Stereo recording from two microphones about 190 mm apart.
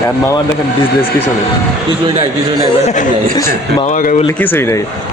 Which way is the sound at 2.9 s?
40° left (ahead or behind).